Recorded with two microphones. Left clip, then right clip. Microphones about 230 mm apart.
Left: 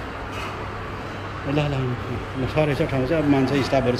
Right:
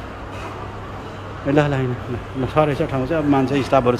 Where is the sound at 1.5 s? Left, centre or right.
Centre.